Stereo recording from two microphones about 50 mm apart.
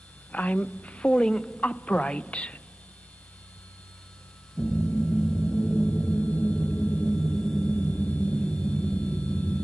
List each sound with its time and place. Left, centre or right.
0.3 s a woman's voice: left
4.6 s gong: left